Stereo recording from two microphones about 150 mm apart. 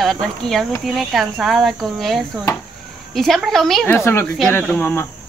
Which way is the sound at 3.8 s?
15° left (ahead or behind).